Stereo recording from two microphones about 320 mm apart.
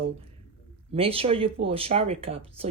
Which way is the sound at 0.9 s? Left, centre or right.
Centre.